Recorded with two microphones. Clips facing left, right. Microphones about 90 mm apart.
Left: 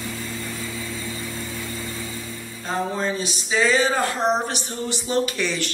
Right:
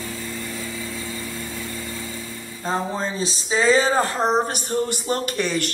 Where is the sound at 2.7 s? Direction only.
35° right (ahead or behind).